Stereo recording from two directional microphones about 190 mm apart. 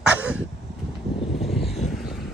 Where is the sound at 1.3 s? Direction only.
Centre (ahead or behind).